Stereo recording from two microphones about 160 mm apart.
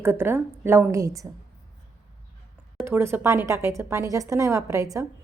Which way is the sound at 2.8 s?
15° right (ahead or behind).